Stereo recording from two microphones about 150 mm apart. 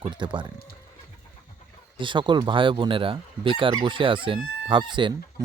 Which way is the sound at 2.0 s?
30° right (ahead or behind).